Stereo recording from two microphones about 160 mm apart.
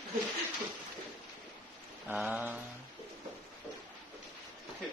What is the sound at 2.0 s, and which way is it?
Mantra, 5° right (ahead or behind).